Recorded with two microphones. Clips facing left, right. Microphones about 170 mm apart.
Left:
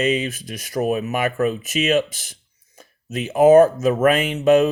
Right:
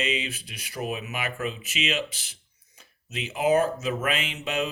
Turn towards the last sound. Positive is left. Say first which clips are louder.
# left 14 dB
turn(degrees=50)  # may be behind; listen again after turning